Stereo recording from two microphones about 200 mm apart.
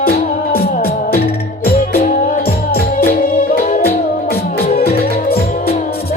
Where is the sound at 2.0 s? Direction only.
40° left (ahead or behind).